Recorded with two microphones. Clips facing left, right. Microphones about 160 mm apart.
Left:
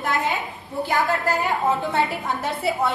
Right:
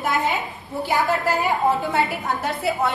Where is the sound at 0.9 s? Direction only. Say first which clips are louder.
Right 1 dB; 10° right (ahead or behind).